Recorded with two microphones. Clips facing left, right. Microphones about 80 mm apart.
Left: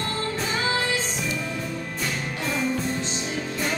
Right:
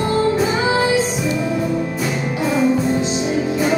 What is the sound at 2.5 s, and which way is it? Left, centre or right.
Music, centre.